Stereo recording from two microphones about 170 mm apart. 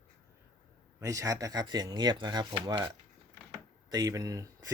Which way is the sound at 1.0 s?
20° right (ahead or behind).